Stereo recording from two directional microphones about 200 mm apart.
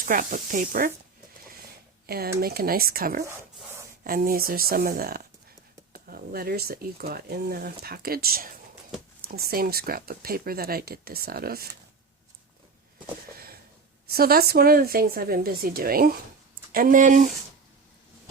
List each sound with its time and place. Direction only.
0.0 s speech: 40° right (ahead or behind)
2.0 s speech: 50° right (ahead or behind)
14.1 s speech: 50° right (ahead or behind)